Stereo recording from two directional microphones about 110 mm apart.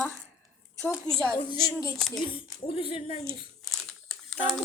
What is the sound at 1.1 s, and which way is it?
Speech, 5° left (ahead or behind).